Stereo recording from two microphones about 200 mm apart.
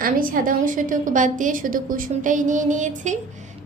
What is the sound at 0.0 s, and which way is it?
A woman's voice, 45° right (ahead or behind).